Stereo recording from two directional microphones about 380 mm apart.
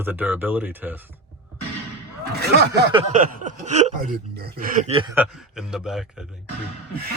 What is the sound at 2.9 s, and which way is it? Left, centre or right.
Speech, centre.